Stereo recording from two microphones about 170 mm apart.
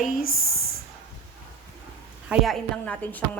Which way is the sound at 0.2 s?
60° left (ahead or behind).